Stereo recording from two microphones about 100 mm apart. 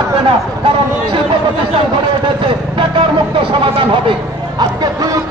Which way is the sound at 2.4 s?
55° right (ahead or behind).